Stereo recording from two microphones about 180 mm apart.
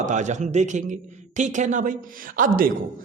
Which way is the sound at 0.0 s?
40° right (ahead or behind).